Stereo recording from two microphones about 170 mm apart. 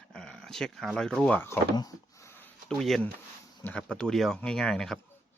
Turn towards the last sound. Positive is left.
turn(degrees=5)  # may be behind; listen again after turning